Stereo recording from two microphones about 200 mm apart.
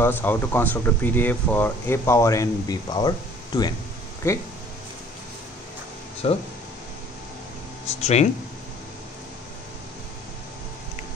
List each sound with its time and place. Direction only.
0.0 s speech: 10° left (ahead or behind)
6.2 s speech: 30° left (ahead or behind)
8.0 s speech: 35° left (ahead or behind)